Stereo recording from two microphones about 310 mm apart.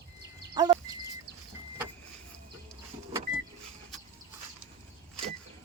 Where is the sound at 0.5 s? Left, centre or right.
Centre.